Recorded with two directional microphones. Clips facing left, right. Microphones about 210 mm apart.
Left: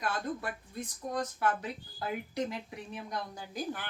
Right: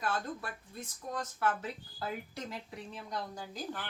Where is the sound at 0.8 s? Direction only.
15° left (ahead or behind).